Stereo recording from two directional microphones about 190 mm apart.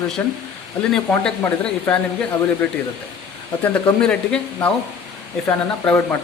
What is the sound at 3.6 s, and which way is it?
Speech, 10° left (ahead or behind).